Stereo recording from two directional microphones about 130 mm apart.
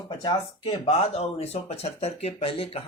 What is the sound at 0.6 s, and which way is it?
Speech, 50° left (ahead or behind).